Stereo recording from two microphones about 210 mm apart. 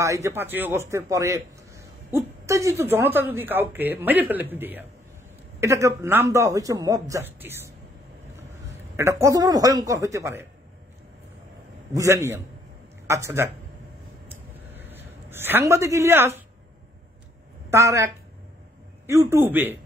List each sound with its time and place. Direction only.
0.0 s a man's voice: 15° right (ahead or behind)
11.9 s a man's voice: 15° right (ahead or behind)
14.3 s a sound: 10° right (ahead or behind)
17.6 s a woman's voice: 15° right (ahead or behind)